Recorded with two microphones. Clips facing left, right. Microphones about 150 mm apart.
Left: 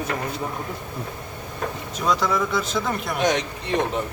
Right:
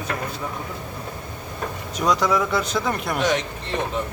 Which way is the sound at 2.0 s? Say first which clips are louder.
Right 2 dB; centre (ahead or behind).